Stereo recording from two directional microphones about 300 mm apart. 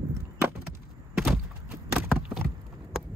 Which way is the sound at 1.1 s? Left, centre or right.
Centre.